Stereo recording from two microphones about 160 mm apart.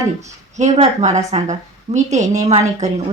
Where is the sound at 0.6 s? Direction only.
45° right (ahead or behind).